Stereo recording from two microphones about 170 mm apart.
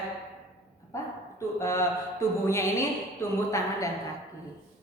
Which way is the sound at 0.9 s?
20° left (ahead or behind).